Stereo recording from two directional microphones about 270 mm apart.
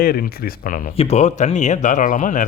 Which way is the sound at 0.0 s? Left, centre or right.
Left.